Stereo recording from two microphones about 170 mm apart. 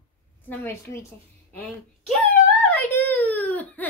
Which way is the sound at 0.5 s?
10° left (ahead or behind).